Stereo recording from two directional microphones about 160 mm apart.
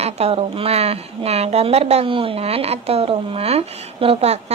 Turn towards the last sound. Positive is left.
turn(degrees=-40)  # may be behind; listen again after turning